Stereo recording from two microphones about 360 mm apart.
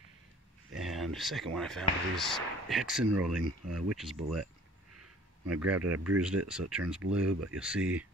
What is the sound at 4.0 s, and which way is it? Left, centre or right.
Speech, centre.